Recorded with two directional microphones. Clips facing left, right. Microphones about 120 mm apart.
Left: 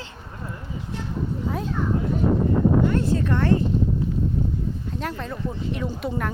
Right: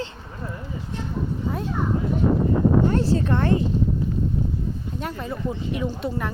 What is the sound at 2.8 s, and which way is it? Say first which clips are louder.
Speech: right 1 dB; 30° right (ahead or behind).